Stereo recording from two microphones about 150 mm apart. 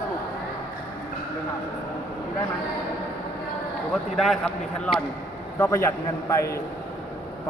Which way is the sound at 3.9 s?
Centre (ahead or behind).